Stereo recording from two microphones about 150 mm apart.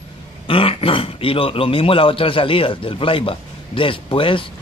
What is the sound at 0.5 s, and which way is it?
Speech, 40° left (ahead or behind).